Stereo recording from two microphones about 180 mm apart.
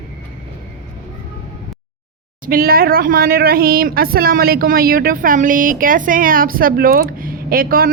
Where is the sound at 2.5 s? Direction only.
55° right (ahead or behind).